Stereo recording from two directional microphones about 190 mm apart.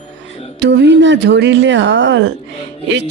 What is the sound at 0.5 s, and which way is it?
Speech, 65° right (ahead or behind).